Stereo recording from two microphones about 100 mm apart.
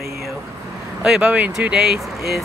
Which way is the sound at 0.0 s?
30° right (ahead or behind).